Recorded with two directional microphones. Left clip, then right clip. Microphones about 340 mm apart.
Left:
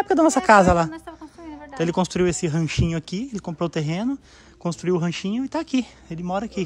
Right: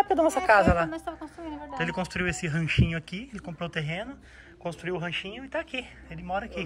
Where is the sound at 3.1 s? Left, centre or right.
Left.